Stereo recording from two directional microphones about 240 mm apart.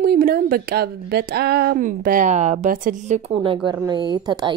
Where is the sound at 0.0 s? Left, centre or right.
Right.